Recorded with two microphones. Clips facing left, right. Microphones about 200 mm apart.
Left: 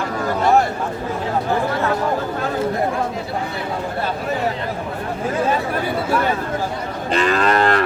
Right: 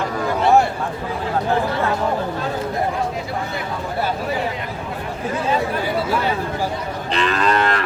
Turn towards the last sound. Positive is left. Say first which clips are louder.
# left 2 dB
turn(degrees=45)  # may be behind; listen again after turning